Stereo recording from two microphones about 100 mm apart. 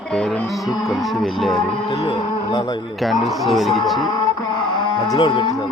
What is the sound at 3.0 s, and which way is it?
Music, centre (ahead or behind).